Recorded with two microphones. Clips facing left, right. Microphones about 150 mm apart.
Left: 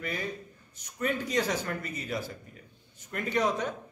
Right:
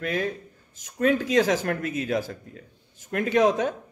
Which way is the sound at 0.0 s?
90° right.